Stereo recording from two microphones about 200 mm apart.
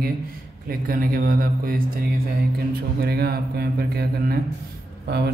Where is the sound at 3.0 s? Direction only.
50° right (ahead or behind).